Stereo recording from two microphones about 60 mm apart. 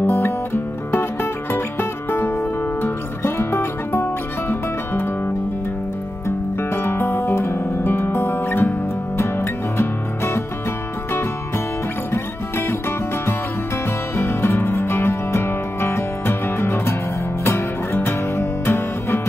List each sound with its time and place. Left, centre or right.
0.0 s music: left
6.2 s music: left
12.1 s music: left
14.1 s music: left